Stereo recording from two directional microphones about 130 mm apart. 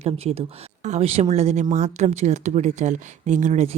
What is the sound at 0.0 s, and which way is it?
Speech, 55° right (ahead or behind).